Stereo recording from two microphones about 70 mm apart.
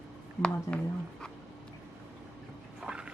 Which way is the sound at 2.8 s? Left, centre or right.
Centre.